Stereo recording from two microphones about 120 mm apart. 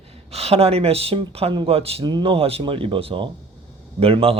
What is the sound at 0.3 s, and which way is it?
Speech, 55° right (ahead or behind).